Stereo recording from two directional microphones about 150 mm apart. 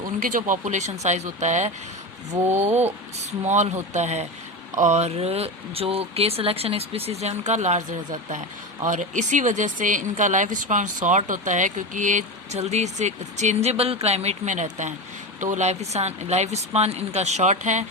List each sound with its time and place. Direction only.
0.2 s speech: 65° right (ahead or behind)